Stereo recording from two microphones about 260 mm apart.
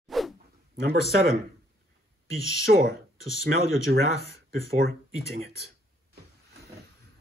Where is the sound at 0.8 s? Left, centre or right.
Right.